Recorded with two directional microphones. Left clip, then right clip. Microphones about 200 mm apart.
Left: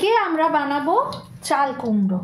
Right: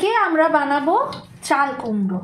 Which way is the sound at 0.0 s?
5° right (ahead or behind).